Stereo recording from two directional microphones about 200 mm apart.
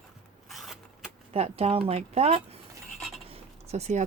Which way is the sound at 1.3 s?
30° right (ahead or behind).